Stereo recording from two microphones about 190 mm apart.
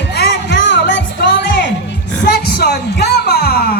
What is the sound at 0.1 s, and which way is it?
Music, 65° left (ahead or behind).